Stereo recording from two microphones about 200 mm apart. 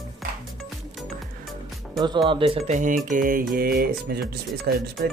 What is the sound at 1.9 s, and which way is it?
Speech, 20° right (ahead or behind).